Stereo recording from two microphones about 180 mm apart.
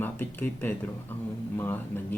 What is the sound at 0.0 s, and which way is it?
Speech, 10° left (ahead or behind).